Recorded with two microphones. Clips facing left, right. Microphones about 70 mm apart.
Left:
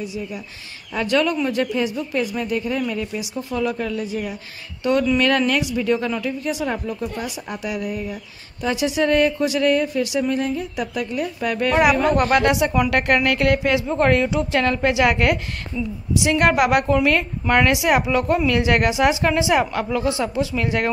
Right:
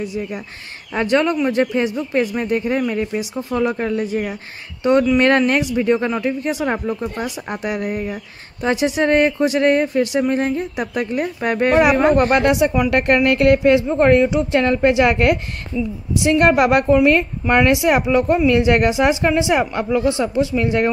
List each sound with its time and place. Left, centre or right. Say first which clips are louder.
0.0 s speech: right 4 dB; right
0.9 s speech: right 3 dB; right
8.6 s a woman's voice: right 3 dB; right